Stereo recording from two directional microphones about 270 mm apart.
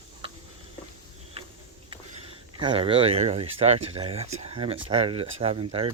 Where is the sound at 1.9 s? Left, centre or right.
Centre.